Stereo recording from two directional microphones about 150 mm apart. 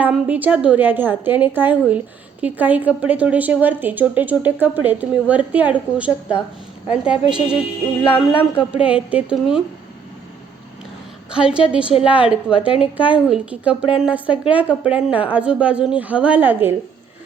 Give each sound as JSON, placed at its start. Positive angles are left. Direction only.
{"t": 0.0, "sound": "a woman's voice", "side_deg": -10}
{"t": 8.0, "sound": "speech", "side_deg": 35}
{"t": 8.8, "sound": "a woman's voice", "side_deg": -10}
{"t": 11.3, "sound": "a woman's voice", "side_deg": -5}